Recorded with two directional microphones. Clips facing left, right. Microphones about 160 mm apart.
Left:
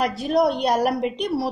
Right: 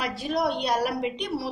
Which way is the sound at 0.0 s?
45° left (ahead or behind).